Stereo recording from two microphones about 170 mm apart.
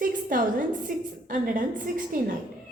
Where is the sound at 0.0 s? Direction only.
55° right (ahead or behind).